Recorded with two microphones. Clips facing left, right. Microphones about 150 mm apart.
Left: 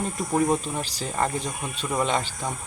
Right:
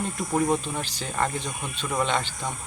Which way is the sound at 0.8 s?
35° left (ahead or behind).